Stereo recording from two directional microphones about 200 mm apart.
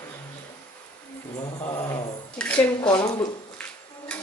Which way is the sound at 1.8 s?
20° left (ahead or behind).